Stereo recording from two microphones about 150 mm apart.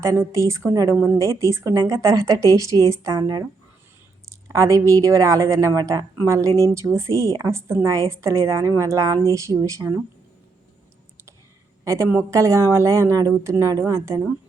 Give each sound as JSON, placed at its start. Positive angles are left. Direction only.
{"t": 0.0, "sound": "a woman's voice", "side_deg": -20}
{"t": 11.9, "sound": "a woman's voice", "side_deg": -20}